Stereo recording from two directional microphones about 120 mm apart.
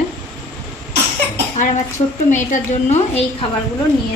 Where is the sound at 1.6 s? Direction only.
90° left; by 3.2 s 65° left (ahead or behind).